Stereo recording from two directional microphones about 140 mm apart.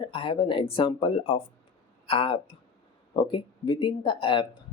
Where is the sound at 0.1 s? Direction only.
40° left (ahead or behind).